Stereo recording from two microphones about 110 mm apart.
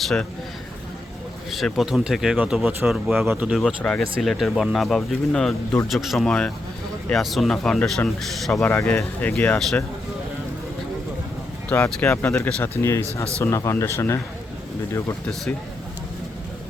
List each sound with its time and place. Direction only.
0.0 s speech: 5° left (ahead or behind)
1.5 s speech: centre (ahead or behind)
3.8 s speech: 5° left (ahead or behind)
8.8 s speech: 20° left (ahead or behind)
9.6 s speech: centre (ahead or behind)
11.7 s speech: 10° left (ahead or behind)
12.8 s speech: 25° left (ahead or behind)